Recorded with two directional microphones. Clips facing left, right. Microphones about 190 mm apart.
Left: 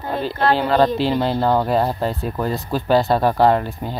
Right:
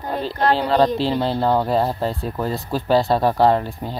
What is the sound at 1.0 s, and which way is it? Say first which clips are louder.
Speech: left 1 dB; 30° right (ahead or behind).